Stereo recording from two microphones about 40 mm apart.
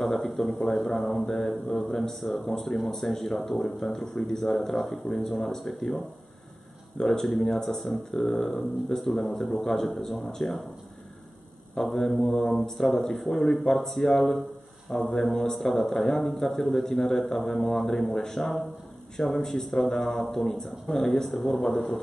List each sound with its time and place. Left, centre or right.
0.0 s speech: centre
11.8 s speech: centre